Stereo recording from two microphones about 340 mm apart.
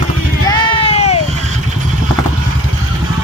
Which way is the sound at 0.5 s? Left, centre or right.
Centre.